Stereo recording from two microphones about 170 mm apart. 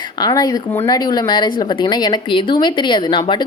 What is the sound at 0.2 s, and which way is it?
Speech, 20° left (ahead or behind).